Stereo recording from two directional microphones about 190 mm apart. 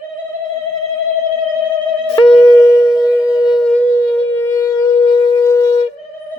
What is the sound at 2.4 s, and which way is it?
Shofar, 15° left (ahead or behind).